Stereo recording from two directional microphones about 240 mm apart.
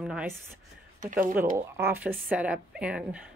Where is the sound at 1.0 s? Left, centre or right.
Right.